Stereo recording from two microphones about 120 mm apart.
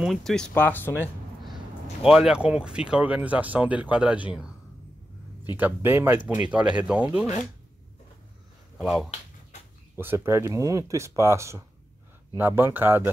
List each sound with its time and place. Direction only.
0.0 s speech: centre (ahead or behind)
2.0 s speech: 5° right (ahead or behind)
5.6 s speech: 15° right (ahead or behind)
8.8 s speech: 5° right (ahead or behind)
9.9 s speech: 20° right (ahead or behind)